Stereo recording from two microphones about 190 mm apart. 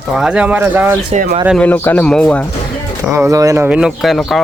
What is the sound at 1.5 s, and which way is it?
Speech, 10° left (ahead or behind).